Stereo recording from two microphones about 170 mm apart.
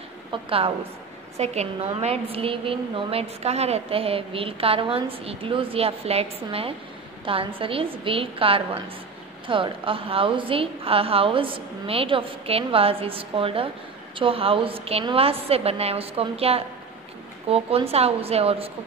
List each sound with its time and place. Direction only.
0.3 s a woman's voice: 35° right (ahead or behind)